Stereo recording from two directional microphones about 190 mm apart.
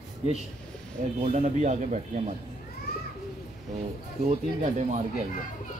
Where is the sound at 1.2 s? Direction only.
40° right (ahead or behind).